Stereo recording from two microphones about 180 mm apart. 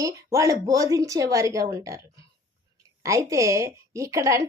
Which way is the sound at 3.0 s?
20° right (ahead or behind).